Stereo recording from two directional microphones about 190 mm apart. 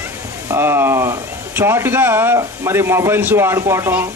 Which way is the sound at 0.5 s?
10° right (ahead or behind).